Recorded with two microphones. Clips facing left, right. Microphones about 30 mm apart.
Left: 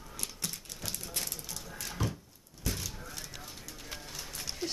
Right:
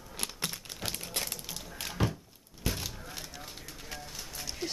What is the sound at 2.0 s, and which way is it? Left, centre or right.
Thunk, right.